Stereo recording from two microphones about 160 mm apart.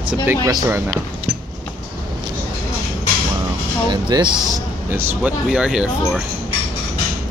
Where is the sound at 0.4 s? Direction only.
20° right (ahead or behind).